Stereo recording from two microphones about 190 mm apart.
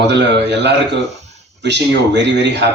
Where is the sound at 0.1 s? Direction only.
65° right (ahead or behind).